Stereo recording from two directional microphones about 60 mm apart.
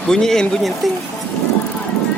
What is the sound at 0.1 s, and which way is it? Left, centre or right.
Speech, centre.